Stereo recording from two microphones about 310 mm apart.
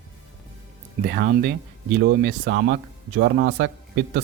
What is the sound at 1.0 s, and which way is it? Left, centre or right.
Speech, right.